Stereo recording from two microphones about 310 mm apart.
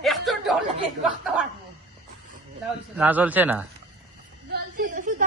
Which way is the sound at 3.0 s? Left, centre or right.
Centre.